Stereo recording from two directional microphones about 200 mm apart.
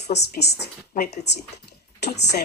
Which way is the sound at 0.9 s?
40° left (ahead or behind).